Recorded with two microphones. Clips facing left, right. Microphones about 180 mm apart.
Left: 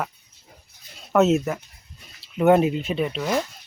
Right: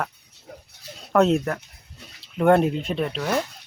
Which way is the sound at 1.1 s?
5° left (ahead or behind).